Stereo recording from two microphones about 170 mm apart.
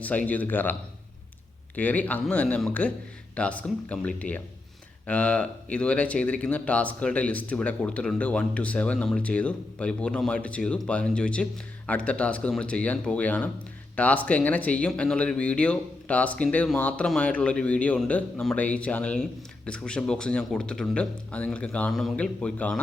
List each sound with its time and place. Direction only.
0.0 s speech: 10° left (ahead or behind)